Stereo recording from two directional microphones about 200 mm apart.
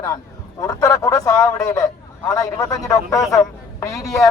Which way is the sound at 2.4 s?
15° left (ahead or behind).